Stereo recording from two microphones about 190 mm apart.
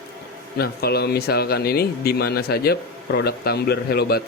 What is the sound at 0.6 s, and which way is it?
Speech, 55° left (ahead or behind).